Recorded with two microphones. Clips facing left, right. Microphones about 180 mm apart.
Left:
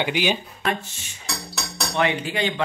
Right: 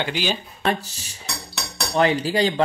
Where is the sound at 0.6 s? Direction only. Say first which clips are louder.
Right 3 dB; 35° right (ahead or behind).